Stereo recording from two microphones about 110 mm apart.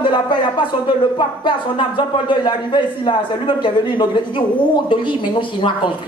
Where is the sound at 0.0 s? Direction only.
45° left (ahead or behind).